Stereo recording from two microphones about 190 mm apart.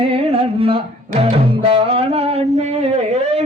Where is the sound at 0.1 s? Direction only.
30° right (ahead or behind).